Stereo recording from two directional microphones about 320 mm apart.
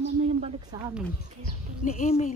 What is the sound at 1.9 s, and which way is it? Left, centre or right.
Speech, left.